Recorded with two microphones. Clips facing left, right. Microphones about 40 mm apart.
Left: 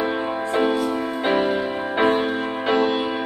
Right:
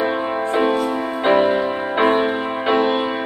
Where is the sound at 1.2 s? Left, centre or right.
Centre.